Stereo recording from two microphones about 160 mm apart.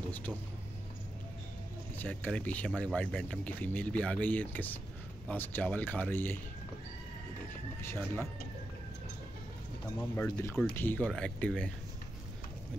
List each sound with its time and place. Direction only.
2.0 s speech: 10° left (ahead or behind)
7.8 s speech: 15° left (ahead or behind)
10.1 s speech: 20° left (ahead or behind)
10.6 s speech: 10° left (ahead or behind)